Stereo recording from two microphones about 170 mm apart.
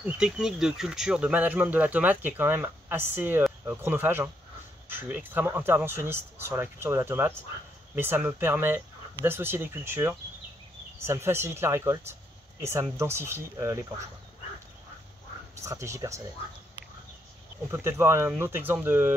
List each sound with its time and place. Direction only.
0.0 s speech: 5° right (ahead or behind)
15.5 s speech: 20° right (ahead or behind)
17.6 s speech: 15° right (ahead or behind)